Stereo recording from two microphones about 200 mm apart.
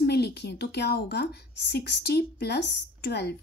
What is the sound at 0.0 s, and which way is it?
A woman's voice, 55° left (ahead or behind).